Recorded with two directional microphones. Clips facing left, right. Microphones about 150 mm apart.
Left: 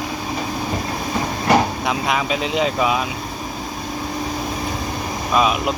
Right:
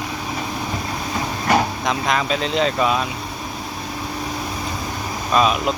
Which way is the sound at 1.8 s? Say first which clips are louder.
Even; 10° left (ahead or behind).